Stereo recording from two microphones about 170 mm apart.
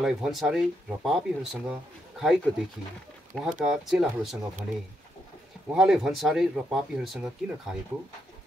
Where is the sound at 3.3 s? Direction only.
5° left (ahead or behind).